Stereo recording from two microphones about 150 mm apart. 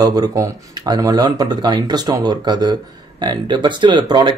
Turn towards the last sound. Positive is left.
turn(degrees=-30)  # may be behind; listen again after turning